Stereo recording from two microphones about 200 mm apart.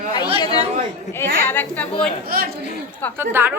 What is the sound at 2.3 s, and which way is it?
Speech, 45° right (ahead or behind).